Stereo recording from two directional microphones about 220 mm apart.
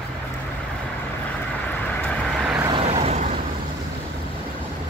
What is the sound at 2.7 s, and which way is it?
Vehicle, 25° right (ahead or behind).